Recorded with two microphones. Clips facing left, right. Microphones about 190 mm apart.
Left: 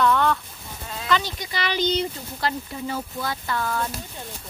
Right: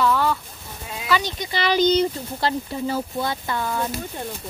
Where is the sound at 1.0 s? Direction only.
10° right (ahead or behind).